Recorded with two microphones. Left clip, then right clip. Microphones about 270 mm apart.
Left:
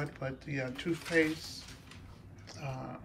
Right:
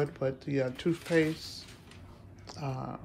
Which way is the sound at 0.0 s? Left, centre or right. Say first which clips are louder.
Right 8 dB; centre.